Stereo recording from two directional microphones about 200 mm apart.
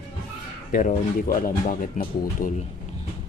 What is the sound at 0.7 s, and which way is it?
Speech, 45° left (ahead or behind).